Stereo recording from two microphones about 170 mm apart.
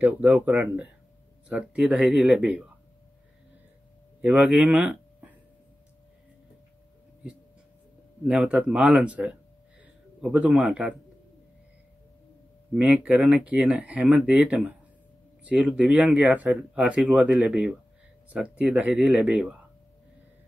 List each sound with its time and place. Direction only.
0.0 s speech: 10° right (ahead or behind)
4.2 s speech: 10° right (ahead or behind)
8.3 s speech: 5° right (ahead or behind)
12.7 s speech: 10° right (ahead or behind)